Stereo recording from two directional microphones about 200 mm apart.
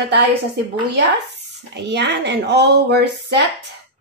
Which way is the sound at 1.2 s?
60° right (ahead or behind).